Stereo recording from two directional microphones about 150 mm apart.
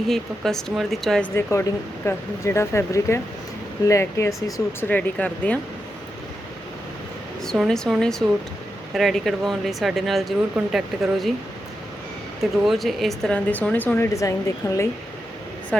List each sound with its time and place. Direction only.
0.1 s speech: centre (ahead or behind)
1.4 s speech: 20° left (ahead or behind)
4.9 s speech: 10° left (ahead or behind)
7.7 s speech: centre (ahead or behind)
12.4 s speech: centre (ahead or behind); by 14.8 s 20° left (ahead or behind)
15.7 s speech: 5° left (ahead or behind)